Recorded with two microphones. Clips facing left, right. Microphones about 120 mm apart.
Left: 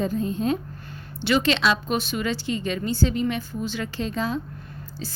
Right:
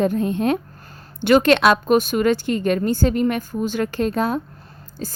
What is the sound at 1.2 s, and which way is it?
Speech, 50° right (ahead or behind).